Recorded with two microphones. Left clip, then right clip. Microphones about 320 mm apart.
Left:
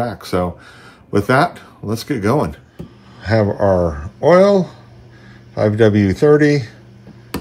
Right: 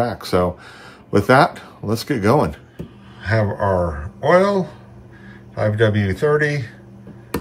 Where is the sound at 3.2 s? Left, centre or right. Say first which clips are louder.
Left 4 dB; centre.